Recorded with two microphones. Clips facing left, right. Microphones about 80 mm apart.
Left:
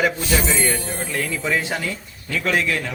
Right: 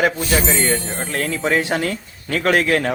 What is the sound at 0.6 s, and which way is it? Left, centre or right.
Speech, right.